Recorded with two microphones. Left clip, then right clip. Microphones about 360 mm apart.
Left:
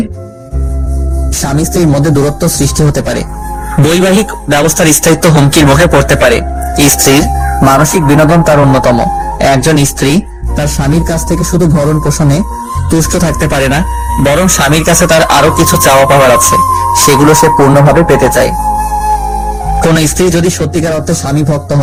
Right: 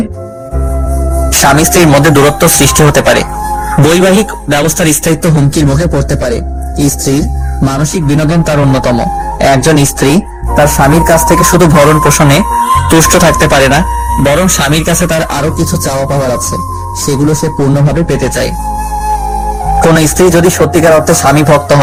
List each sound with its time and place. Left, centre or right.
1.4 s speech: right
3.8 s music: centre
19.6 s speech: centre; by 21.8 s right